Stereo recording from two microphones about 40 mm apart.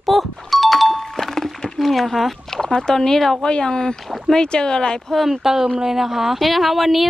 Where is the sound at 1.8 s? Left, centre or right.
Centre.